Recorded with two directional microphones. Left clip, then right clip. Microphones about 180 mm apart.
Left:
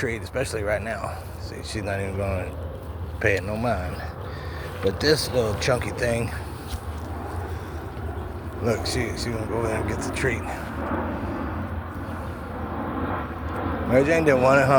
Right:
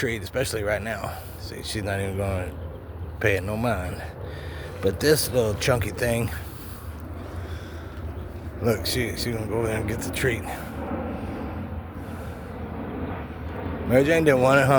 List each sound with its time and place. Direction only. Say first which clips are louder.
0.0 s speech: right 1 dB; 40° right (ahead or behind)
8.6 s speech: right 1 dB; 35° right (ahead or behind)
13.9 s speech: even; 35° right (ahead or behind)